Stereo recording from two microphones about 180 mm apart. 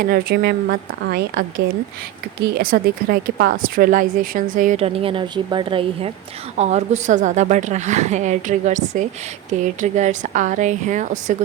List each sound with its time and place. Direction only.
0.0 s a woman's voice: 55° right (ahead or behind)
4.8 s a woman's voice: 35° right (ahead or behind)
6.6 s a woman's voice: 40° right (ahead or behind)